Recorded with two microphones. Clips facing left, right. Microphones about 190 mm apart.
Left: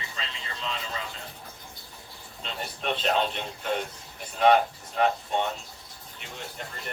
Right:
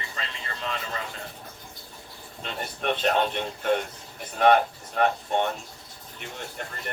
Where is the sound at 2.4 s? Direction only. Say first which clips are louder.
Right 2 dB; 55° right (ahead or behind).